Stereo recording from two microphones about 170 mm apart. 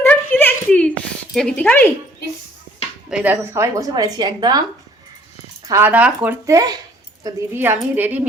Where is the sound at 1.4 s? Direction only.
5° left (ahead or behind).